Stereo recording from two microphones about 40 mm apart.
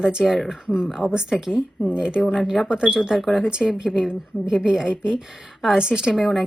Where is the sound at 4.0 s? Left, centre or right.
Centre.